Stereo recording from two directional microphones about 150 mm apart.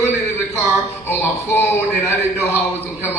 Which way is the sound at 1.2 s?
15° left (ahead or behind).